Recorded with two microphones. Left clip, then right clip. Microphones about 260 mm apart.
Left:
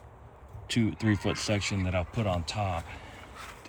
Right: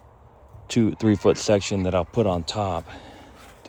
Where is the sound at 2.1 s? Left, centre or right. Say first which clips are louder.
Right 9 dB; right.